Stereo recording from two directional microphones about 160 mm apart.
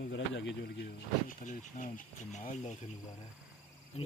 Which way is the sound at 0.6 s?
90° left.